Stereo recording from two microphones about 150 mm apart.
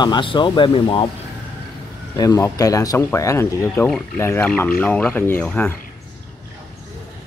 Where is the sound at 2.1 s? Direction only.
20° left (ahead or behind).